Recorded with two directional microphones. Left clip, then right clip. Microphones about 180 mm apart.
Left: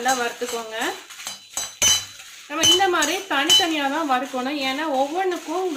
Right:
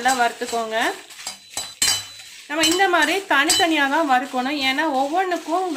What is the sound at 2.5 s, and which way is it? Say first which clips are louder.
A woman's voice: even; 55° right (ahead or behind).